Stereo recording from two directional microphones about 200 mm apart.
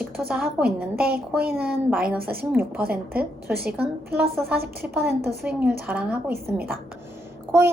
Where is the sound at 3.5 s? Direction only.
50° right (ahead or behind).